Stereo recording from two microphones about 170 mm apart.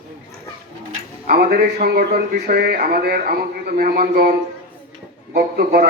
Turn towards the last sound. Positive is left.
turn(degrees=-65)  # may be behind; listen again after turning